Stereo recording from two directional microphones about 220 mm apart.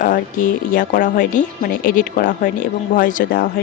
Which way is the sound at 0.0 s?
40° left (ahead or behind).